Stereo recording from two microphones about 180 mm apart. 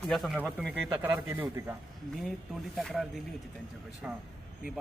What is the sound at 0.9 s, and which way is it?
Speech, 10° right (ahead or behind).